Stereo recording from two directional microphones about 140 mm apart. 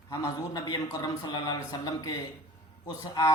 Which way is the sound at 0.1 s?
25° left (ahead or behind).